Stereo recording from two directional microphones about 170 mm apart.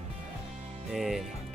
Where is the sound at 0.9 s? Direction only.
Centre (ahead or behind).